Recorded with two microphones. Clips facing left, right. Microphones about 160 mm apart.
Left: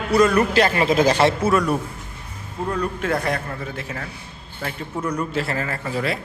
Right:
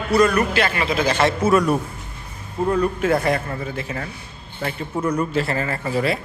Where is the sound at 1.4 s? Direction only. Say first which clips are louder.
Right 2 dB; centre (ahead or behind).